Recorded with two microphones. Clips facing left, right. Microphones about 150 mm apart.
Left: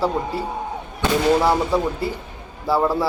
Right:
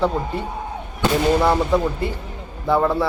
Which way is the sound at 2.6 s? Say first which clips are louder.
Right 1 dB; 5° left (ahead or behind).